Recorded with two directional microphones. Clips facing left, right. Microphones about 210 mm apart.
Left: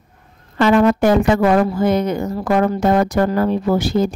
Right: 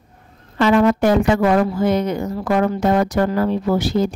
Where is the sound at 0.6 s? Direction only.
50° left (ahead or behind).